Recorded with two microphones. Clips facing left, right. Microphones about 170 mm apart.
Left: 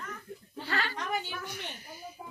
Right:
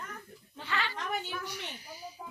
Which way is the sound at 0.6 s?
40° left (ahead or behind).